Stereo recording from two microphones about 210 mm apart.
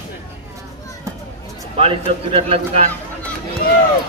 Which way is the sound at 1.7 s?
25° right (ahead or behind).